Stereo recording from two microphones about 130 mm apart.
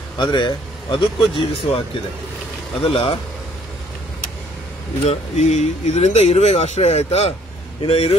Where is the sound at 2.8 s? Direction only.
45° left (ahead or behind).